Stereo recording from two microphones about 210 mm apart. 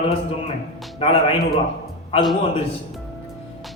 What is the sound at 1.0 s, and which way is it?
Speech, 25° left (ahead or behind).